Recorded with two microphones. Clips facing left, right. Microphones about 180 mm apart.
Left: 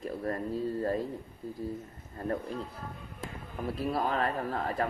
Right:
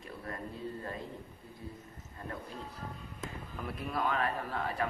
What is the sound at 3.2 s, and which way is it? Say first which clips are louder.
A man's voice: left 4 dB; 30° left (ahead or behind).